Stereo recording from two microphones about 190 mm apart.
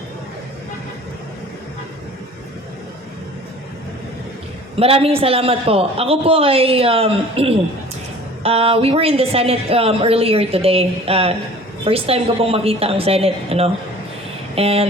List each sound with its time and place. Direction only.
4.8 s speech: 30° right (ahead or behind)